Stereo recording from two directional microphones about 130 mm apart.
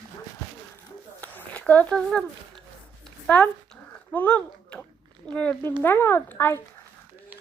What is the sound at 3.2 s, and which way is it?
Speech, 10° left (ahead or behind).